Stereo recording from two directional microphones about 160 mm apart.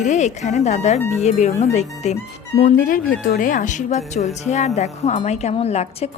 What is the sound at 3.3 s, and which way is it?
A woman's voice, 55° left (ahead or behind).